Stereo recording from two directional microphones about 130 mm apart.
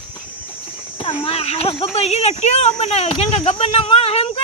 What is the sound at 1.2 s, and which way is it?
Speech, 50° left (ahead or behind).